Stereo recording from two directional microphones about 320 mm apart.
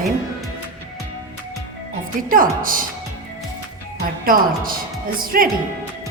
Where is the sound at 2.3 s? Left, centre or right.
Right.